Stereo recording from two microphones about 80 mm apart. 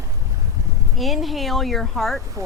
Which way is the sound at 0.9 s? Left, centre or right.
Centre.